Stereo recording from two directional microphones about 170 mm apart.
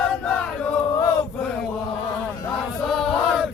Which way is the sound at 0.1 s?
5° left (ahead or behind).